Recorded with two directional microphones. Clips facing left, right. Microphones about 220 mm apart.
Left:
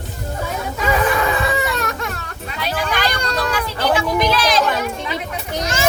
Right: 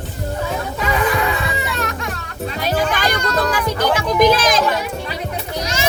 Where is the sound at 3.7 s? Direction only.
45° right (ahead or behind).